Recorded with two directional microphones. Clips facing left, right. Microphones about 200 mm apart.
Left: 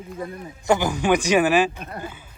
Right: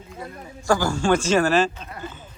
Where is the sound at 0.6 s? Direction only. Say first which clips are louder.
Even; 20° left (ahead or behind).